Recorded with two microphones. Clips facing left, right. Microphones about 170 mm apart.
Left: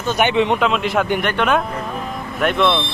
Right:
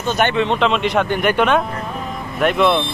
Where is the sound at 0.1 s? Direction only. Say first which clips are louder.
Left 1 dB; 15° left (ahead or behind).